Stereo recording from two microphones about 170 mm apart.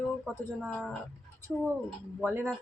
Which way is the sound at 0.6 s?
10° right (ahead or behind).